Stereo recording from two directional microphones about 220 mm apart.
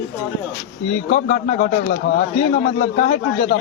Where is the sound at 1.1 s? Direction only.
35° left (ahead or behind).